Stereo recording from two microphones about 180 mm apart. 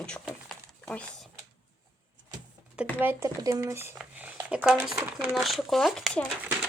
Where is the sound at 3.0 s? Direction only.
15° right (ahead or behind).